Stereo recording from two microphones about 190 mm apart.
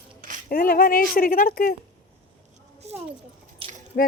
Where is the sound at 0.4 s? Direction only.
50° left (ahead or behind).